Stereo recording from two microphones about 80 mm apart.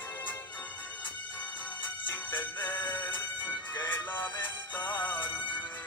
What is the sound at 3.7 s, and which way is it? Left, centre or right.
Music, left.